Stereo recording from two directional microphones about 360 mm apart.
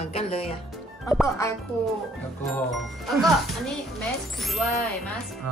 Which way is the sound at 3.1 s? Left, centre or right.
Centre.